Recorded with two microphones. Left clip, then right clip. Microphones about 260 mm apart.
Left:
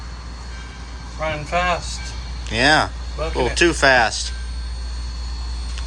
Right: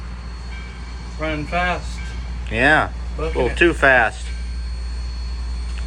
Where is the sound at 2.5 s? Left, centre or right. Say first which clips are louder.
Even; centre.